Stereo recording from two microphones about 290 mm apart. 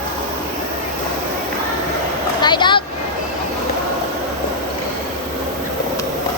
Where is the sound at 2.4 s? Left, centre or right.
Centre.